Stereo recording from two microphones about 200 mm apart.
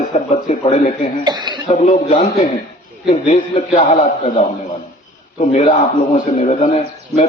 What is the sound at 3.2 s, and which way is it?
A man's voice, 35° left (ahead or behind).